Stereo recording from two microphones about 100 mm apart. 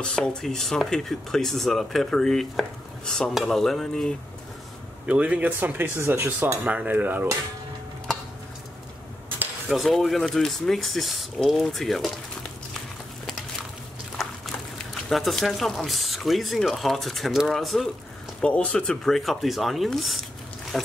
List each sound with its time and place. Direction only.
0.0 s speech: 10° left (ahead or behind)
5.0 s speech: 10° right (ahead or behind)
9.7 s speech: centre (ahead or behind)
15.0 s speech: centre (ahead or behind)
18.4 s speech: 10° left (ahead or behind)
20.7 s music: centre (ahead or behind)